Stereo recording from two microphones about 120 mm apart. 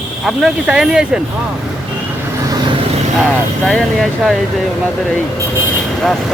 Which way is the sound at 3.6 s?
5° left (ahead or behind).